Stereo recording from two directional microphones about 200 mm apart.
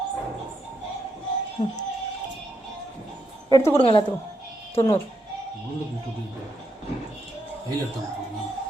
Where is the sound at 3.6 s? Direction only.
25° left (ahead or behind).